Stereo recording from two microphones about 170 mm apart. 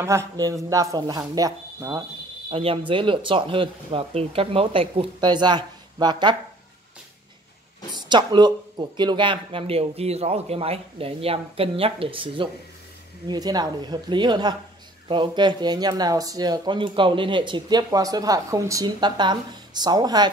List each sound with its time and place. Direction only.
0.0 s speech: 15° right (ahead or behind)
2.5 s speech: 35° right (ahead or behind)
7.9 s speech: 25° right (ahead or behind)